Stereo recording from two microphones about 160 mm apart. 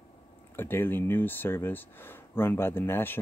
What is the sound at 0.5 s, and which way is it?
Speech, 15° left (ahead or behind).